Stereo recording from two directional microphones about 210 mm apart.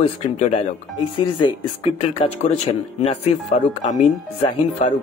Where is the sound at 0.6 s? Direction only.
25° left (ahead or behind).